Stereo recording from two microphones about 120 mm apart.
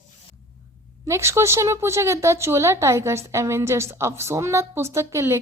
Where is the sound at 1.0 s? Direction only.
25° right (ahead or behind).